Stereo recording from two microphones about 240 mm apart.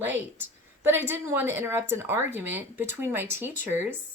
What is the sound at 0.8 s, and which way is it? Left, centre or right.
A woman's voice, centre.